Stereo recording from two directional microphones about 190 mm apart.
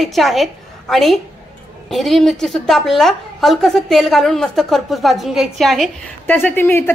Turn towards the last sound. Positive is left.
turn(degrees=10)  # may be behind; listen again after turning